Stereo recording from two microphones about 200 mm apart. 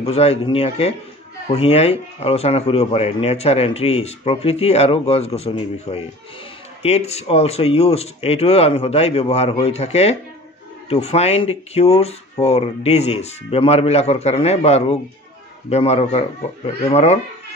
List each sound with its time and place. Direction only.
0.0 s a man's voice: 30° left (ahead or behind)